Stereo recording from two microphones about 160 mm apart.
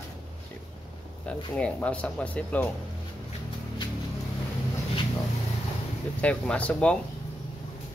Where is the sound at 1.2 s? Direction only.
5° left (ahead or behind).